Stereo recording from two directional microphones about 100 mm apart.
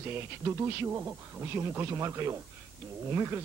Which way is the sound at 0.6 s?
25° right (ahead or behind).